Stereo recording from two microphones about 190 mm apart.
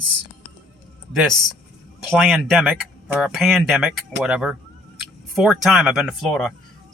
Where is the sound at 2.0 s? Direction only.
Centre (ahead or behind).